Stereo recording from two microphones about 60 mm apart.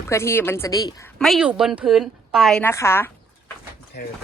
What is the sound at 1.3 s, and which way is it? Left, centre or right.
Speech, centre.